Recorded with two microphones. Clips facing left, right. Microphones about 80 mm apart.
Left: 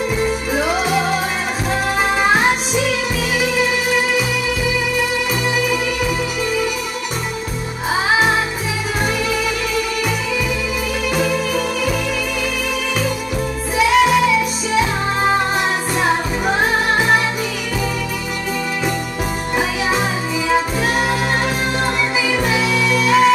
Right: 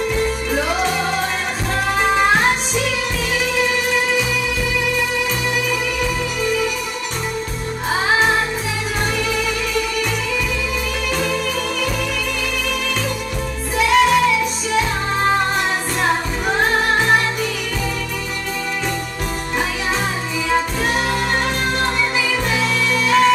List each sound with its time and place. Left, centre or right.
0.1 s music: centre
6.4 s music: centre
7.9 s music: centre
11.1 s music: centre
13.7 s music: centre
20.4 s music: centre
22.4 s music: centre